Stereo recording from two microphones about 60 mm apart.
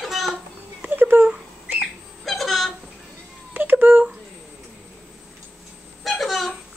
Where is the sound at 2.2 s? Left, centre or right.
Centre.